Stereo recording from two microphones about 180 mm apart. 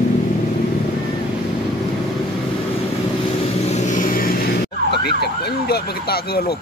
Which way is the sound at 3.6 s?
40° left (ahead or behind).